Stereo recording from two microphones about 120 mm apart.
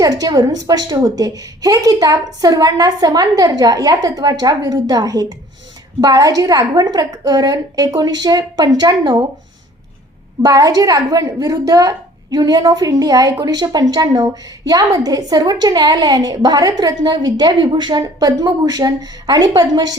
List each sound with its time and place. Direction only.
0.0 s a woman's voice: 35° right (ahead or behind)
10.4 s a woman's voice: 30° right (ahead or behind)